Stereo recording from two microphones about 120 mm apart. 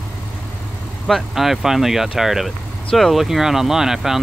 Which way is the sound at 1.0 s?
Centre (ahead or behind).